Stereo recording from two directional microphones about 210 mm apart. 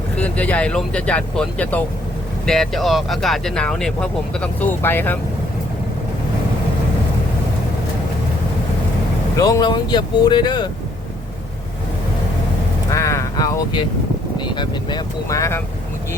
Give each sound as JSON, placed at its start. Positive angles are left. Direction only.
{"t": 0.2, "sound": "speech", "side_deg": 5}
{"t": 9.3, "sound": "speech", "side_deg": 15}
{"t": 12.9, "sound": "a sound", "side_deg": 15}
{"t": 14.3, "sound": "speech", "side_deg": 20}